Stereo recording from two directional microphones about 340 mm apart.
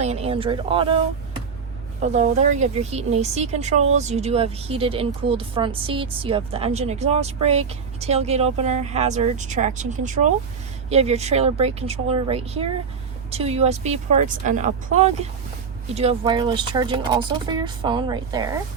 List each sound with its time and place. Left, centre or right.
0.0 s speech: centre
2.0 s a woman's voice: centre